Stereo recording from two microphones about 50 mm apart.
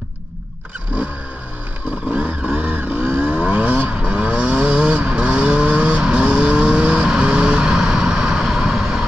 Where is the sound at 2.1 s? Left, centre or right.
Right.